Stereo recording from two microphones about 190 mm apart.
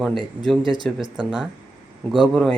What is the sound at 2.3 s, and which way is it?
Speech, centre (ahead or behind).